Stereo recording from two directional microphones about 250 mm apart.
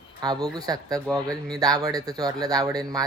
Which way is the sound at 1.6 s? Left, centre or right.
Centre.